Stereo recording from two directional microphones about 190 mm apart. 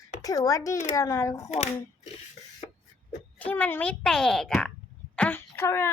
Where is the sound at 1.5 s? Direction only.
35° left (ahead or behind).